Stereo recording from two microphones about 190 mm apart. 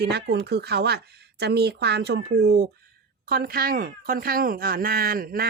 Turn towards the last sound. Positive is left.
turn(degrees=-50)  # may be behind; listen again after turning